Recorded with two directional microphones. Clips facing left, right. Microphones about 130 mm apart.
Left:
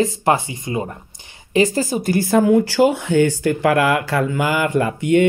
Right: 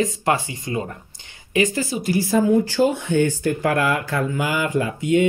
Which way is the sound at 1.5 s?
35° left (ahead or behind).